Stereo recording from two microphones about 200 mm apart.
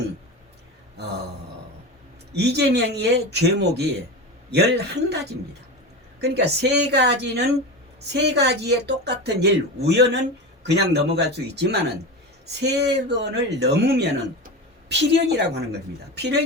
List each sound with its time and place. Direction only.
2.3 s speech: 55° right (ahead or behind)
6.1 s speech: 55° right (ahead or behind)